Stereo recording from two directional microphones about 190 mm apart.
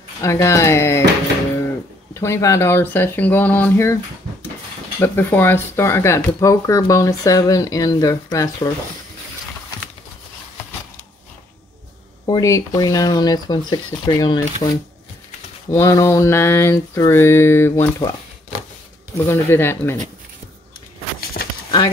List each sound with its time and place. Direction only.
0.2 s speech: 15° left (ahead or behind)
2.1 s speech: 15° left (ahead or behind)
12.3 s speech: 15° left (ahead or behind)
19.2 s speech: 10° left (ahead or behind)
21.2 s a sound: 50° left (ahead or behind)